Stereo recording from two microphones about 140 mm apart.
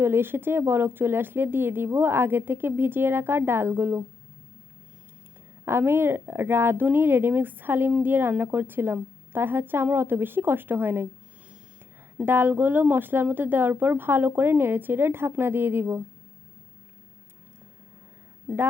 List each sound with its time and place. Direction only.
0.0 s speech: 15° right (ahead or behind)
5.6 s speech: 15° right (ahead or behind)
12.1 s speech: 15° right (ahead or behind)